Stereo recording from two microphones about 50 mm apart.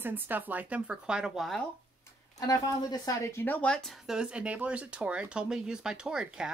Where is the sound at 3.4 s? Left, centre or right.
Left.